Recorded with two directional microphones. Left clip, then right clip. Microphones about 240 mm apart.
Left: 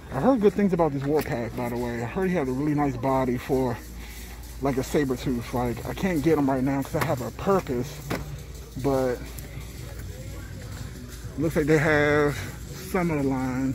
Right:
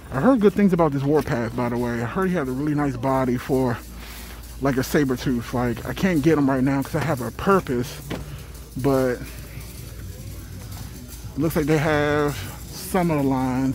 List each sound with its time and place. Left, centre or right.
0.1 s speech: right
2.2 s speech: centre; by 7.9 s right
8.8 s speech: right
11.5 s speech: centre
12.9 s speech: centre